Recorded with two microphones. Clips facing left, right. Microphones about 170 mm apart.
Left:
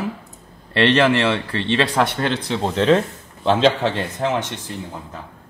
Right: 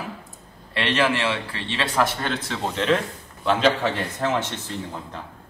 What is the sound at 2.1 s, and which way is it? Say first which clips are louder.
Speech: left 5 dB; centre (ahead or behind).